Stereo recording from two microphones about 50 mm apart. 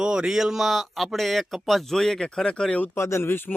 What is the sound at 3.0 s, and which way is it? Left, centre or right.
Speech, left.